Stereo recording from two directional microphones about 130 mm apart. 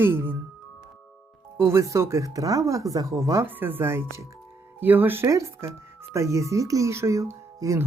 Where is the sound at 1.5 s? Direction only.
20° right (ahead or behind).